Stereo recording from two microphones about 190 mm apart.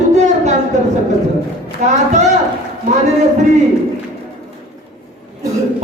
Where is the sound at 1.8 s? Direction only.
40° right (ahead or behind).